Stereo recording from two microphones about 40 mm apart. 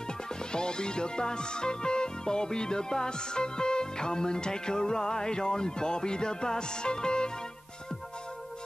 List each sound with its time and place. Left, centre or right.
0.4 s speech: left